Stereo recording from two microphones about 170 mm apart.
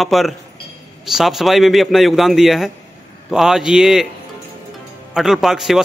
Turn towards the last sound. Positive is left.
turn(degrees=0)  # may be behind; listen again after turning